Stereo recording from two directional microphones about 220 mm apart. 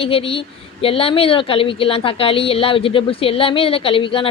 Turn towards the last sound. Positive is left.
turn(degrees=25)  # may be behind; listen again after turning